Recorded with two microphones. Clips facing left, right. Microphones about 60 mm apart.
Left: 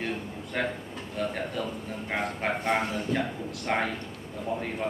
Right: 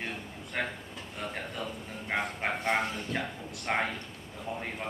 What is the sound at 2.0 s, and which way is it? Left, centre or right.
Speech, centre.